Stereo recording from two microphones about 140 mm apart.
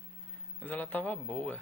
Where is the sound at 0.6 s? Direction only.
10° left (ahead or behind).